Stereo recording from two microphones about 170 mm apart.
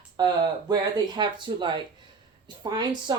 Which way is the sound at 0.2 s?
25° right (ahead or behind).